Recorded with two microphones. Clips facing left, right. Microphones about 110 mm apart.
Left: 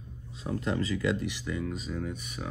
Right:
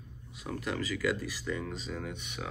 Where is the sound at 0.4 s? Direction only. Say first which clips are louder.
Left 4 dB; 30° left (ahead or behind).